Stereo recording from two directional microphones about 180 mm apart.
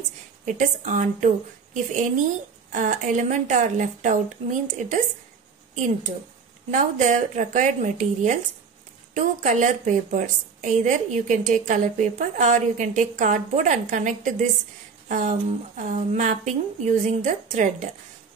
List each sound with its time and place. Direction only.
0.5 s a woman's voice: 45° right (ahead or behind)
6.7 s a woman's voice: 45° right (ahead or behind)